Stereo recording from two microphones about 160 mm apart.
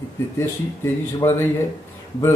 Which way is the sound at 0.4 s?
15° left (ahead or behind).